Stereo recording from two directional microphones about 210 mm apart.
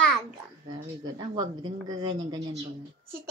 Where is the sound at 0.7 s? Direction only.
20° right (ahead or behind).